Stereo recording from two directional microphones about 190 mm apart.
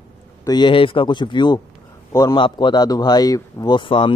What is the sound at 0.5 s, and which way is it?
A man's voice, 25° left (ahead or behind).